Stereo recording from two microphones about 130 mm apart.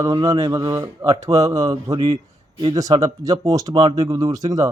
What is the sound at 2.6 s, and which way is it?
Speech, 30° right (ahead or behind).